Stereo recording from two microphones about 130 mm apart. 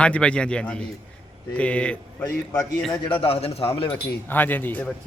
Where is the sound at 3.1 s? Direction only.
45° left (ahead or behind).